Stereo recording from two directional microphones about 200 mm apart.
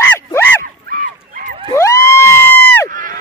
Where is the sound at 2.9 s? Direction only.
45° right (ahead or behind).